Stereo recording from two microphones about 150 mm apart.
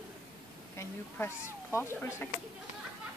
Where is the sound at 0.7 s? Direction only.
15° left (ahead or behind).